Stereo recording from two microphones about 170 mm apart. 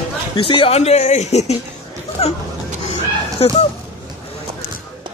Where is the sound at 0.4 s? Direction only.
30° left (ahead or behind).